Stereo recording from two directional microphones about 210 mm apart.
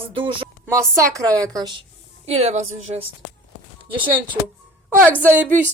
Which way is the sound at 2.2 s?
30° right (ahead or behind).